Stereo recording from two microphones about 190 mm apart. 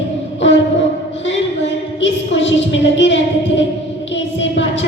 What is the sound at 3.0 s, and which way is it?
Speech, 75° left (ahead or behind).